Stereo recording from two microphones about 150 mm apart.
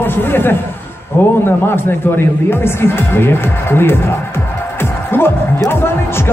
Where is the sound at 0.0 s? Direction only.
15° left (ahead or behind).